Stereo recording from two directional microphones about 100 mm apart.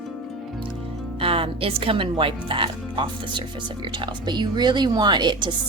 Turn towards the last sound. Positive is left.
turn(degrees=-50)  # may be behind; listen again after turning